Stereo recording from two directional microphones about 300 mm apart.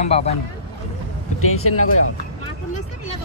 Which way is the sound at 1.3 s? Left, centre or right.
Left.